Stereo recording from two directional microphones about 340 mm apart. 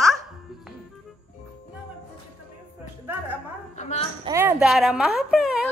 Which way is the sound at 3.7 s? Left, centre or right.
Left.